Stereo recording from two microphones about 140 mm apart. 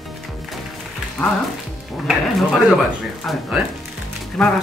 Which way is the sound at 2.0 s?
5° right (ahead or behind).